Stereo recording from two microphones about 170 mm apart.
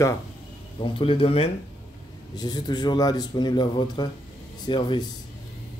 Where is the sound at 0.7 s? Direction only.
30° left (ahead or behind).